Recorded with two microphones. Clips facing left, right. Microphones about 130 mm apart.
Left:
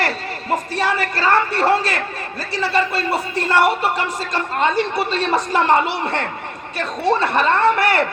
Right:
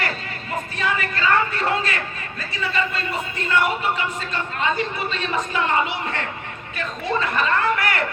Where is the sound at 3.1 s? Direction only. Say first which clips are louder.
Left 4 dB; 80° left.